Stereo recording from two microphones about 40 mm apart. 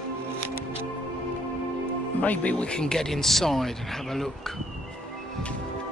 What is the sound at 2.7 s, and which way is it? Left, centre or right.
Speech, centre.